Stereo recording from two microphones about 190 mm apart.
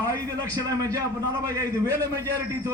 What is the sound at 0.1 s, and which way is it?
A man's voice, 20° right (ahead or behind).